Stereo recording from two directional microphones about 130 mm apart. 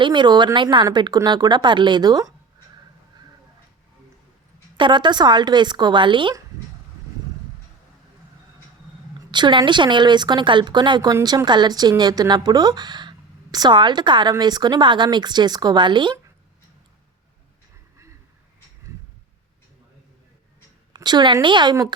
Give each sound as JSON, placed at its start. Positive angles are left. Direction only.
{"t": 0.0, "sound": "speech", "side_deg": -35}
{"t": 4.8, "sound": "speech", "side_deg": -35}
{"t": 9.3, "sound": "speech", "side_deg": -35}
{"t": 20.9, "sound": "speech", "side_deg": -35}